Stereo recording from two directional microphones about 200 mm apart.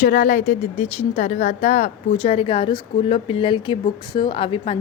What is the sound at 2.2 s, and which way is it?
Speech, 25° left (ahead or behind).